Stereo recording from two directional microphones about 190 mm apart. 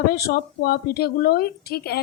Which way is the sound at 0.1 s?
55° left (ahead or behind).